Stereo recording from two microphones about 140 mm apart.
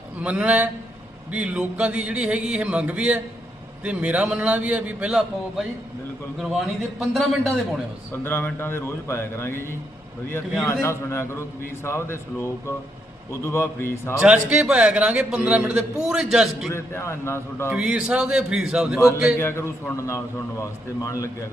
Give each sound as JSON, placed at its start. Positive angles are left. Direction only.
{"t": 0.2, "sound": "a man's voice", "side_deg": -10}
{"t": 7.0, "sound": "speech", "side_deg": 0}
{"t": 8.1, "sound": "a man's voice", "side_deg": 15}
{"t": 10.7, "sound": "a man's voice", "side_deg": 20}
{"t": 14.2, "sound": "a man's voice", "side_deg": -5}
{"t": 16.7, "sound": "a man's voice", "side_deg": 20}
{"t": 17.7, "sound": "speech", "side_deg": -5}
{"t": 19.4, "sound": "a man's voice", "side_deg": 20}